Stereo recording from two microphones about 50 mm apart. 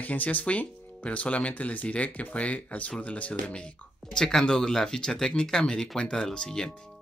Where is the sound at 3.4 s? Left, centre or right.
Centre.